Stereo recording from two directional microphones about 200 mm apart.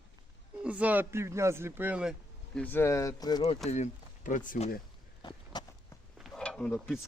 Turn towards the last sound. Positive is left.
turn(degrees=0)  # may be behind; listen again after turning